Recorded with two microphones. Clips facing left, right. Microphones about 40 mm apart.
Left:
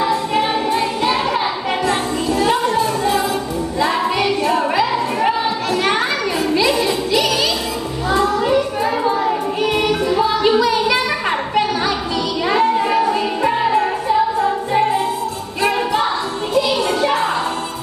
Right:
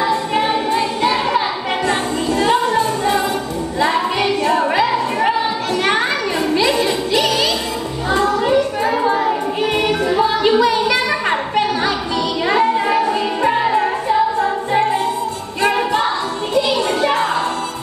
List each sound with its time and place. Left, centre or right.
1.0 s a sound: centre
2.5 s music: right
5.9 s children playing: centre
6.6 s music: right
9.0 s a sound: right
9.8 s music: centre
12.4 s music: centre
17.0 s music: right